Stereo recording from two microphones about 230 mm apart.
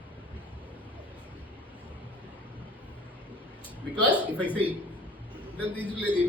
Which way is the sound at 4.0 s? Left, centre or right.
Centre.